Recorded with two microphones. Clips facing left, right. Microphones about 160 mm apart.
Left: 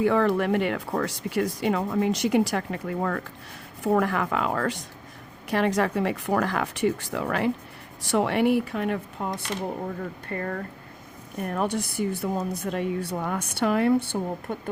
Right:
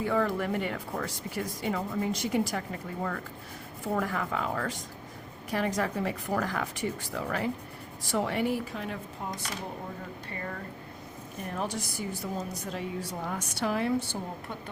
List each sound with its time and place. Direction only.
0.0 s a woman's voice: 80° left; by 14.5 s 60° left (ahead or behind)